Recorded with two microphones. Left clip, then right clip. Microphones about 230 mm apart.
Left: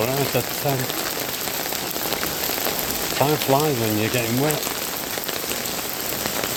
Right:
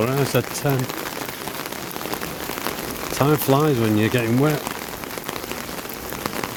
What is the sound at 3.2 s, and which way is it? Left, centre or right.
Speech, right.